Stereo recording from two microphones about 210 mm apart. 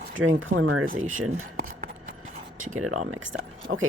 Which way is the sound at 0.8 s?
40° right (ahead or behind).